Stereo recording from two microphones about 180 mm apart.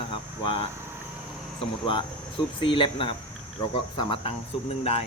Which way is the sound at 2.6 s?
30° left (ahead or behind).